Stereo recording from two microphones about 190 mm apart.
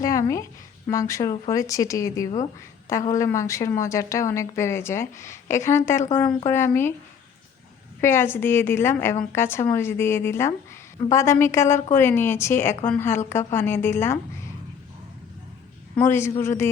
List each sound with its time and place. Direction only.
0.0 s a sound: 15° left (ahead or behind)
0.9 s speech: 15° left (ahead or behind)
8.0 s speech: 10° left (ahead or behind)
16.0 s speech: 15° left (ahead or behind)